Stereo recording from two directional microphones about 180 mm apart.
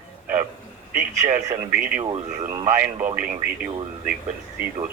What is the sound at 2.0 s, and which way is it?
Speech, 35° right (ahead or behind).